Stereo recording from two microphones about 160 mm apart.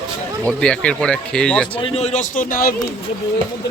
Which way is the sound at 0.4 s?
5° left (ahead or behind).